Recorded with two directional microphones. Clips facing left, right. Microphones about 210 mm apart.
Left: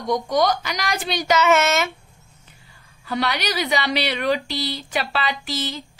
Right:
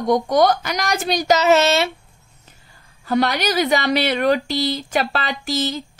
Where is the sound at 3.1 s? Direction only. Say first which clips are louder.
Right 5 dB; 45° right (ahead or behind).